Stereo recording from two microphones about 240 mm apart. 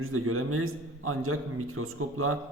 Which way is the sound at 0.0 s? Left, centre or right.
Right.